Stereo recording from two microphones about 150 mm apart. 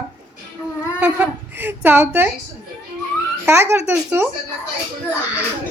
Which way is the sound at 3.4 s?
15° right (ahead or behind).